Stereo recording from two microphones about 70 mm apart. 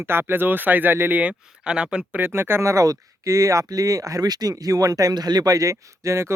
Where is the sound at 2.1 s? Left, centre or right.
Right.